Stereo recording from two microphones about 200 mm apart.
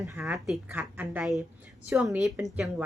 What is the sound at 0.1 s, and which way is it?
A woman's voice, 5° right (ahead or behind).